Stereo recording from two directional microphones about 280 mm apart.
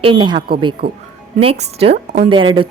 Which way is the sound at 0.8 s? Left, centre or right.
Right.